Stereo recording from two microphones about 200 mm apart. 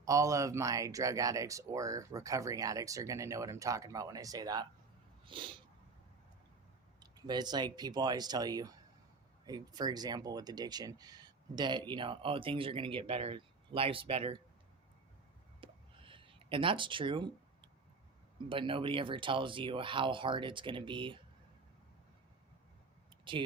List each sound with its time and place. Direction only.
0.0 s speech: 15° right (ahead or behind)
5.2 s sneeze: 25° right (ahead or behind)
7.0 s speech: 20° right (ahead or behind)
15.6 s a sound: 25° right (ahead or behind)
18.4 s speech: 25° right (ahead or behind)